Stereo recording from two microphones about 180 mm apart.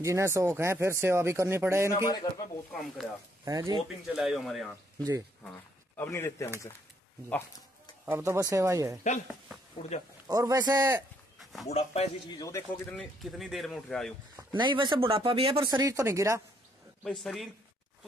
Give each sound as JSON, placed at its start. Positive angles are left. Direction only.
{"t": 0.0, "sound": "speech", "side_deg": -15}
{"t": 2.0, "sound": "speech", "side_deg": 20}
{"t": 2.7, "sound": "speech", "side_deg": 0}
{"t": 3.4, "sound": "speech", "side_deg": -20}
{"t": 4.1, "sound": "speech", "side_deg": 0}
{"t": 5.9, "sound": "speech", "side_deg": 15}
{"t": 8.0, "sound": "speech", "side_deg": -15}
{"t": 10.2, "sound": "speech", "side_deg": -20}
{"t": 11.7, "sound": "speech", "side_deg": 35}
{"t": 12.4, "sound": "speech", "side_deg": 15}
{"t": 12.9, "sound": "speech", "side_deg": 0}
{"t": 14.3, "sound": "speech", "side_deg": -25}
{"t": 17.0, "sound": "speech", "side_deg": 0}